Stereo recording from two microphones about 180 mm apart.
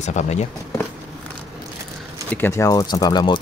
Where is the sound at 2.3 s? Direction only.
15° left (ahead or behind).